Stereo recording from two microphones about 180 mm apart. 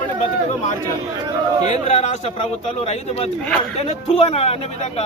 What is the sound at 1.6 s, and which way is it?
Speech, 40° left (ahead or behind).